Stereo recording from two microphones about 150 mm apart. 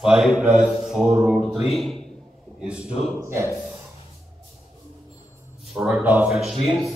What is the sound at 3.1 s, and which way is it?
Speech, 20° right (ahead or behind).